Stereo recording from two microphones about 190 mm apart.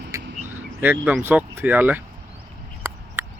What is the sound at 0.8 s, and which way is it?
Speech, 10° right (ahead or behind).